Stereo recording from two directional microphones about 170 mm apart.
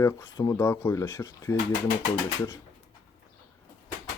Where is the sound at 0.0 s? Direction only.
20° left (ahead or behind).